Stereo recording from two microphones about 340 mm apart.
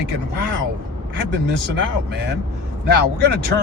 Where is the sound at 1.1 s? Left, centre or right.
Right.